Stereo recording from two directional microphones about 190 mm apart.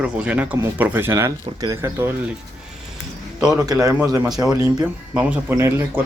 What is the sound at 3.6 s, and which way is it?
Speech, 20° right (ahead or behind).